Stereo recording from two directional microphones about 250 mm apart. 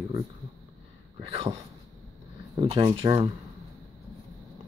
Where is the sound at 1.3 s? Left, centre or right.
Centre.